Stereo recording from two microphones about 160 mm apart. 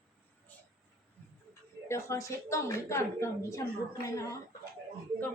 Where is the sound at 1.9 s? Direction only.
20° left (ahead or behind).